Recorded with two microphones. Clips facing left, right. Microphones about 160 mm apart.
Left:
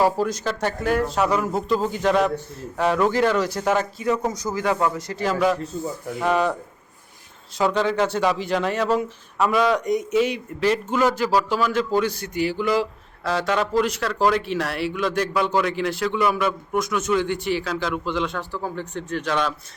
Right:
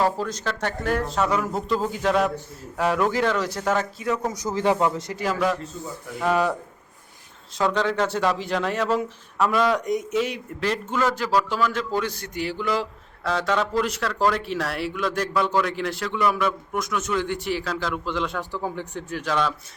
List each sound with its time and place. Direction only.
0.0 s a man's voice: 10° left (ahead or behind)
4.5 s speech: 25° right (ahead or behind)
6.1 s a man's voice: centre (ahead or behind)
7.6 s a man's voice: 5° left (ahead or behind)
18.3 s speech: 15° right (ahead or behind)
19.0 s a man's voice: 5° right (ahead or behind)